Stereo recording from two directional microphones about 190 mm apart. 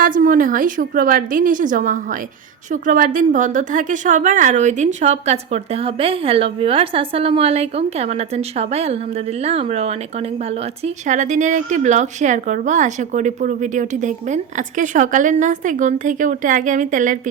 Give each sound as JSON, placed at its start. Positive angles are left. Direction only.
{"t": 0.0, "sound": "a woman's voice", "side_deg": -45}